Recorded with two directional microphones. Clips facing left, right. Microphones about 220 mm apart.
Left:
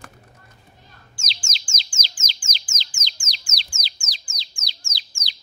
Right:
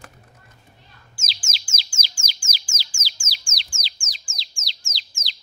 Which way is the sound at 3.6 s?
40° left (ahead or behind).